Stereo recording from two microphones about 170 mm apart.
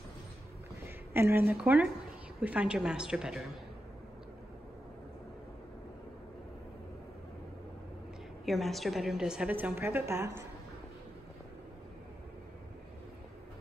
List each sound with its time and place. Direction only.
0.8 s a woman's voice: 15° right (ahead or behind)
8.5 s a woman's voice: centre (ahead or behind); by 10.4 s 15° right (ahead or behind)